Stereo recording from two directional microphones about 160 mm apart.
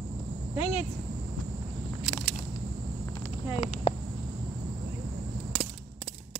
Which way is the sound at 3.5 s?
40° left (ahead or behind).